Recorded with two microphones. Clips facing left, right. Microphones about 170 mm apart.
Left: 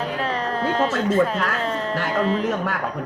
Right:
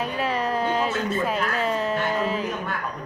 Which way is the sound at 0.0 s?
10° right (ahead or behind).